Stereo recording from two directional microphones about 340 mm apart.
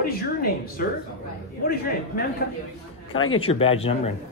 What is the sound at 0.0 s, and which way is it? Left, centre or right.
A man's voice, left.